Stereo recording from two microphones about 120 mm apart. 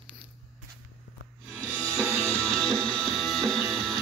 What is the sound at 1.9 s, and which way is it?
Music, 20° right (ahead or behind).